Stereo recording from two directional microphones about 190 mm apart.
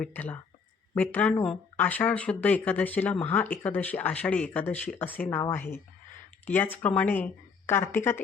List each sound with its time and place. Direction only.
0.0 s speech: 10° left (ahead or behind)